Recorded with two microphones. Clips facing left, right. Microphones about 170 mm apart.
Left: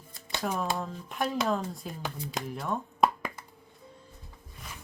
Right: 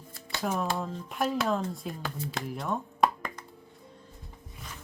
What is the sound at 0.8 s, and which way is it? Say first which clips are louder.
Speech: right 1 dB; centre (ahead or behind).